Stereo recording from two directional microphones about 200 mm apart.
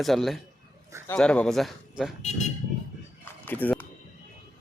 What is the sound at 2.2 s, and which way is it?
Speech, 35° left (ahead or behind).